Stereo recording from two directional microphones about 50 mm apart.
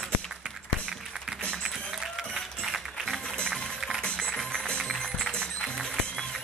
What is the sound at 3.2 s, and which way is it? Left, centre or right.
Music, left.